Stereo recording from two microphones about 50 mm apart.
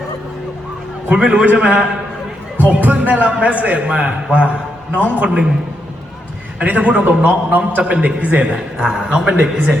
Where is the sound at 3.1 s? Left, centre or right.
Right.